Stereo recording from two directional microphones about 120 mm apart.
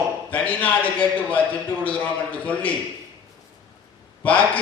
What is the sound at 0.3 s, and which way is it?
A man's voice, 10° left (ahead or behind).